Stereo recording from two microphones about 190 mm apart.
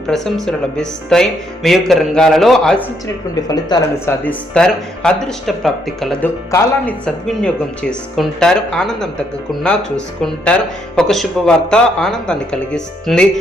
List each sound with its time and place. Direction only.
0.1 s speech: centre (ahead or behind)
3.5 s speech: 20° left (ahead or behind)
4.2 s speech: 5° left (ahead or behind)
10.2 s speech: 5° left (ahead or behind)